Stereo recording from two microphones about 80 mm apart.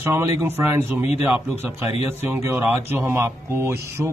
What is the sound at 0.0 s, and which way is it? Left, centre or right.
Speech, right.